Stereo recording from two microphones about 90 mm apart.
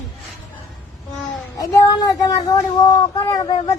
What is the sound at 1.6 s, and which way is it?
A child's voice, 40° left (ahead or behind).